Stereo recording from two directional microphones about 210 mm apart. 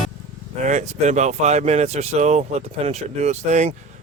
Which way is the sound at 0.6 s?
35° right (ahead or behind).